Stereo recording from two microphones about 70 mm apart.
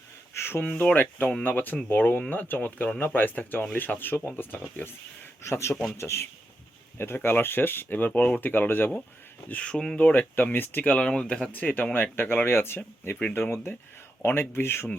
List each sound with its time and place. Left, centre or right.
0.3 s a sound: left
0.6 s speech: left
5.4 s a man's voice: left
9.5 s speech: centre
10.1 s speech: left
10.9 s speech: centre; by 14.8 s left